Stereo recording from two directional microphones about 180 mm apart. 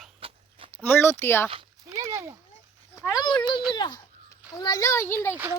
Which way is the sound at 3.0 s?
20° left (ahead or behind).